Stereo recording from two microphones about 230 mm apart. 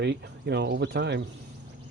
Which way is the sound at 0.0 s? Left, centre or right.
Right.